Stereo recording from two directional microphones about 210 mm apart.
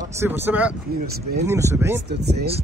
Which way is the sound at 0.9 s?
45° right (ahead or behind).